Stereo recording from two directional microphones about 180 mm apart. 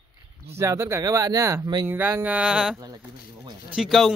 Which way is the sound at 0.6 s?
15° right (ahead or behind).